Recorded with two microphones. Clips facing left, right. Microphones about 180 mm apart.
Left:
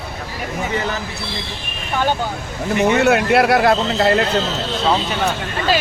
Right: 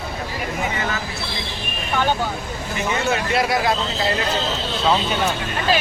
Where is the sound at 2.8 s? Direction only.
65° left (ahead or behind).